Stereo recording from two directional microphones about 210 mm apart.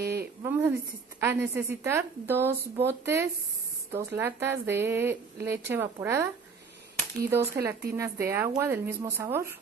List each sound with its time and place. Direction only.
0.0 s a sound: 50° right (ahead or behind)
0.4 s a woman's voice: 10° right (ahead or behind)
7.2 s a woman's voice: 10° right (ahead or behind)